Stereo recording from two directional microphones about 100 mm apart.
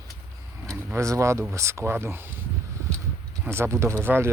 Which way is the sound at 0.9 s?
30° right (ahead or behind).